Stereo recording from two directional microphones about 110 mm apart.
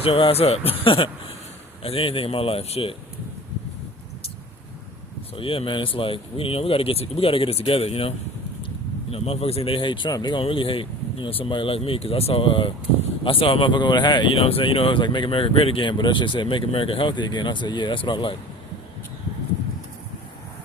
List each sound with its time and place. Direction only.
0.0 s speech: 60° left (ahead or behind)
5.4 s speech: 55° left (ahead or behind)
10.4 s speech: 55° left (ahead or behind)
14.3 s speech: 60° left (ahead or behind)